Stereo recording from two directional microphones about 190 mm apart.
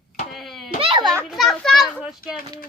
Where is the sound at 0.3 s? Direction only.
Centre (ahead or behind).